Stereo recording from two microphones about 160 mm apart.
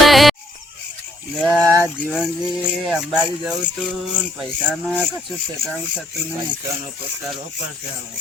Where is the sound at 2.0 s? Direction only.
5° right (ahead or behind).